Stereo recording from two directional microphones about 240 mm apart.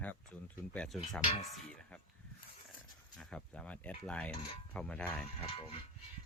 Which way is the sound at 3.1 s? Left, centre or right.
Centre.